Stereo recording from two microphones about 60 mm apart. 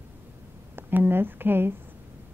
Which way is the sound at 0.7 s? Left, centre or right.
Right.